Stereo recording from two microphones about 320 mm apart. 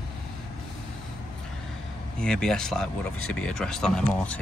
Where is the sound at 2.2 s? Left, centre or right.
Centre.